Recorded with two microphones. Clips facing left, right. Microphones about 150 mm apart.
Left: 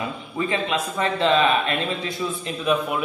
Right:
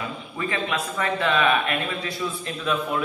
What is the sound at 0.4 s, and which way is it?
A man's voice, 20° left (ahead or behind).